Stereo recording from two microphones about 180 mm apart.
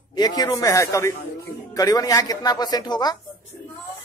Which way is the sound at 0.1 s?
20° left (ahead or behind).